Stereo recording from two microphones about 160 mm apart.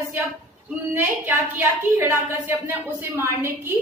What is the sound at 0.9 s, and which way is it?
A woman's voice, 15° right (ahead or behind).